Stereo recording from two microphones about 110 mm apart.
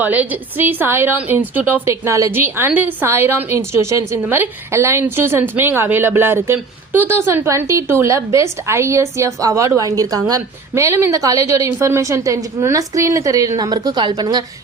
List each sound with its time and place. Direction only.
0.0 s a woman's voice: 15° right (ahead or behind); by 14.4 s 40° right (ahead or behind)